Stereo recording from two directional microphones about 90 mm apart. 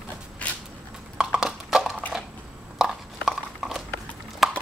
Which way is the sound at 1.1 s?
5° right (ahead or behind).